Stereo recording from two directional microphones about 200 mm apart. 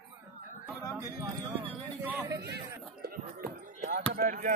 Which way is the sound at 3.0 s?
50° right (ahead or behind).